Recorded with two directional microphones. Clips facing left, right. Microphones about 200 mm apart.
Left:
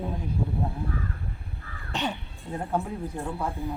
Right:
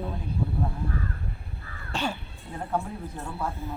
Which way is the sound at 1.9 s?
20° left (ahead or behind).